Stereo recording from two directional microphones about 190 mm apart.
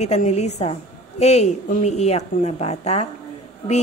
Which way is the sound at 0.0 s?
35° left (ahead or behind).